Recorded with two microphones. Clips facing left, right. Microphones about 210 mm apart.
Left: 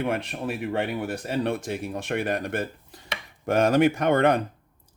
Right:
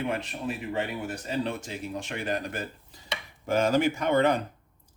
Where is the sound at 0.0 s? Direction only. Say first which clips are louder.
Left 3 dB; 60° left (ahead or behind).